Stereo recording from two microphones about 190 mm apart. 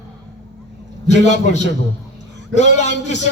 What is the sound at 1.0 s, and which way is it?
Speech, 35° left (ahead or behind).